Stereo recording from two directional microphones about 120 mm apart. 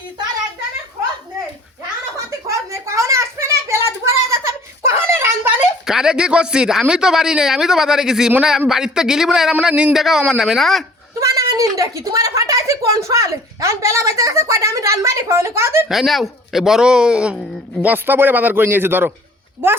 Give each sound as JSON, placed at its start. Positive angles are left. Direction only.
{"t": 2.8, "sound": "a sound", "side_deg": -25}
{"t": 5.8, "sound": "a man's voice", "side_deg": -5}
{"t": 11.2, "sound": "a woman's voice", "side_deg": -30}
{"t": 15.9, "sound": "a man's voice", "side_deg": 0}